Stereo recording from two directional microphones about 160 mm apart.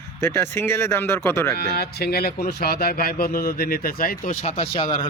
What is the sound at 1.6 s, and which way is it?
Speech, 90° left.